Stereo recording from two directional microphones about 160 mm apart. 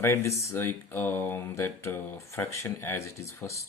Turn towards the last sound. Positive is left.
turn(degrees=20)  # may be behind; listen again after turning